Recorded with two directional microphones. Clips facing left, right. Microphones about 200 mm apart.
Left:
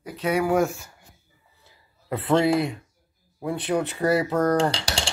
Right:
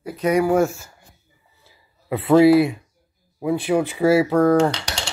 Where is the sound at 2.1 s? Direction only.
5° right (ahead or behind).